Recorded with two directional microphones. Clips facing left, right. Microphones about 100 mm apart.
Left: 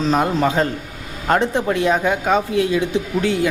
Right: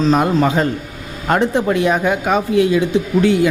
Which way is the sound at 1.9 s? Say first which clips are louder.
Right 1 dB; 15° right (ahead or behind).